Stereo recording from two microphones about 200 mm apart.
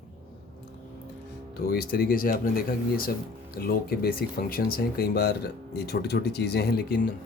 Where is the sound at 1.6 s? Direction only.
50° left (ahead or behind).